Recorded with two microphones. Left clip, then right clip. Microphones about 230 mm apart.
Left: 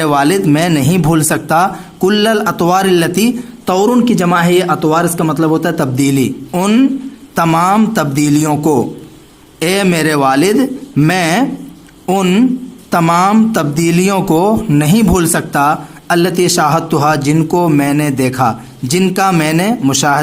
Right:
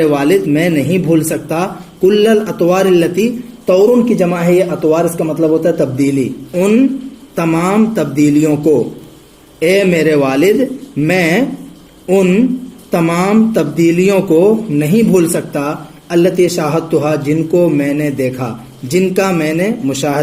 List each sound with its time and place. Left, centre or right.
0.0 s speech: left
9.6 s speech: left